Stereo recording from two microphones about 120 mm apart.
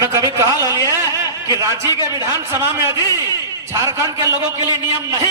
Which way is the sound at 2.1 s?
25° right (ahead or behind).